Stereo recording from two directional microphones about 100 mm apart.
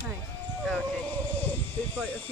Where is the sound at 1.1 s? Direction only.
15° left (ahead or behind).